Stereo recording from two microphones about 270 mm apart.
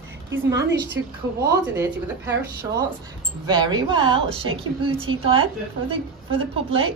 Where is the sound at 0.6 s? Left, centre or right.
Right.